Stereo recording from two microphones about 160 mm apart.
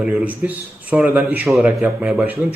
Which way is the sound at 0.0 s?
10° right (ahead or behind).